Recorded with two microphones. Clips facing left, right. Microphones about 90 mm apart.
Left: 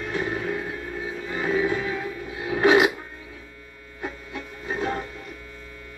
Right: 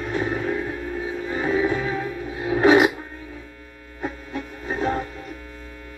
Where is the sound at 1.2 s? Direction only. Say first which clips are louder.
Right 2 dB; 30° right (ahead or behind).